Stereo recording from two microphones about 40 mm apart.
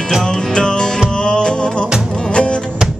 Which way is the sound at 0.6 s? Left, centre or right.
Centre.